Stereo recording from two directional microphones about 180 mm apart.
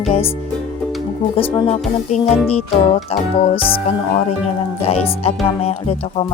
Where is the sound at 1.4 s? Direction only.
30° left (ahead or behind).